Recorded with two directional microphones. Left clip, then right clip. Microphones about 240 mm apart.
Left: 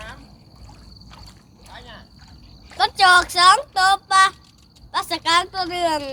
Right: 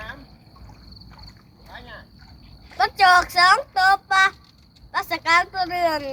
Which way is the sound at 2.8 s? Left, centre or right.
Centre.